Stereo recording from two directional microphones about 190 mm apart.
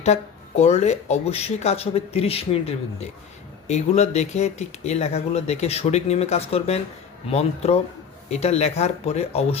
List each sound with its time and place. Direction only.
0.0 s speech: 35° left (ahead or behind)